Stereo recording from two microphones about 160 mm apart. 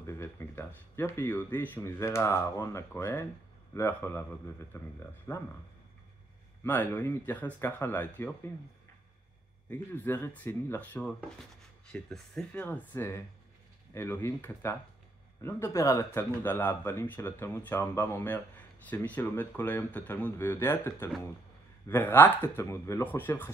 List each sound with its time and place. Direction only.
0.0 s speech: 15° left (ahead or behind)
6.6 s speech: 10° left (ahead or behind)
9.7 s speech: 10° left (ahead or behind)